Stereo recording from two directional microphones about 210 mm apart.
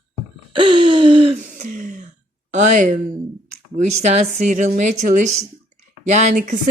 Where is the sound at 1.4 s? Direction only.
35° right (ahead or behind).